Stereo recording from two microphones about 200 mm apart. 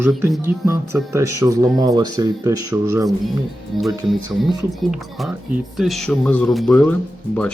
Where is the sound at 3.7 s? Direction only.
Centre (ahead or behind).